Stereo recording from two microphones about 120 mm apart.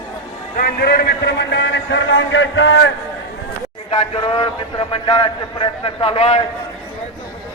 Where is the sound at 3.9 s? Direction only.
50° left (ahead or behind).